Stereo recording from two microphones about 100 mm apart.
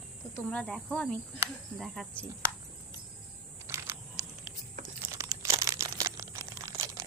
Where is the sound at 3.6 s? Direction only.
25° right (ahead or behind).